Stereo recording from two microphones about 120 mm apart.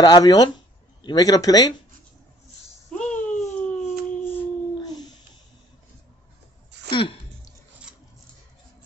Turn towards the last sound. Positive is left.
turn(degrees=45)  # may be behind; listen again after turning